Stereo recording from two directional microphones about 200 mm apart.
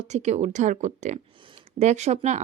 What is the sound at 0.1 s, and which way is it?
Speech, 35° right (ahead or behind).